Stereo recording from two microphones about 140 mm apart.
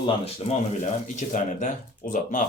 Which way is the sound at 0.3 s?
50° left (ahead or behind).